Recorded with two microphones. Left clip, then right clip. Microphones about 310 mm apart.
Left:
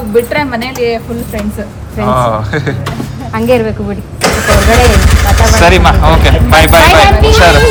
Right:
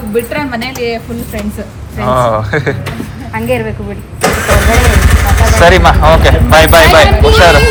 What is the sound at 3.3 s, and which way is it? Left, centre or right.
Speech, left.